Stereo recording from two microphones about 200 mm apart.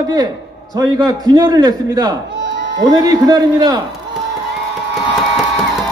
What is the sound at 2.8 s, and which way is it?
Speech, 20° right (ahead or behind).